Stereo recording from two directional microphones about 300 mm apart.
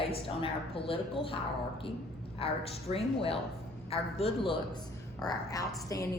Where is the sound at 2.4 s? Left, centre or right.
Centre.